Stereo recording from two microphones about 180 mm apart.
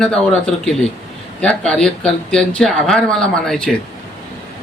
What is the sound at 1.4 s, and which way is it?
Speech, 5° left (ahead or behind).